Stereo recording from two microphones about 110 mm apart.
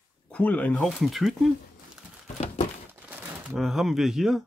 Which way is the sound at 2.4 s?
90° left.